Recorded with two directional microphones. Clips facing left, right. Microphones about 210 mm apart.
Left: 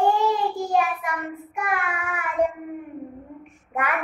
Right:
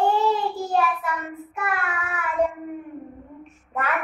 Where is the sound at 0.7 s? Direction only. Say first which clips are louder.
Right 2 dB; 15° left (ahead or behind).